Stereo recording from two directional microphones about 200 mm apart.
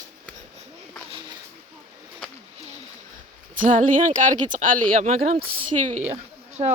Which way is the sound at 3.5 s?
40° right (ahead or behind).